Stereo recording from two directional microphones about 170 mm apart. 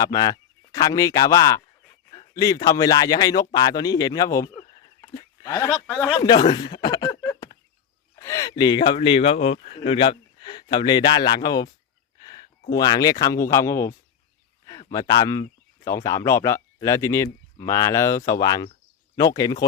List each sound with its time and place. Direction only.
0.0 s speech: 20° left (ahead or behind)
5.7 s speech: 5° left (ahead or behind)
6.1 s speech: 25° left (ahead or behind)
12.7 s speech: 25° left (ahead or behind)